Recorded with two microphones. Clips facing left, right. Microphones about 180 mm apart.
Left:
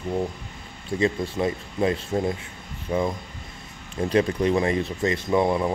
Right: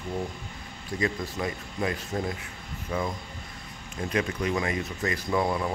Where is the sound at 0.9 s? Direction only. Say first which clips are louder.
Left 6 dB; 25° left (ahead or behind).